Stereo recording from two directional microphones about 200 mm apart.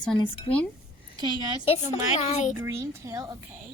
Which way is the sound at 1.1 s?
20° right (ahead or behind).